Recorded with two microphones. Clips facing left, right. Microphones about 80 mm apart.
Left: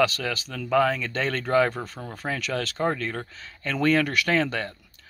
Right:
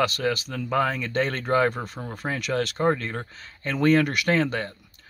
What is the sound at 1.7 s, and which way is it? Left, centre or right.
Speech, centre.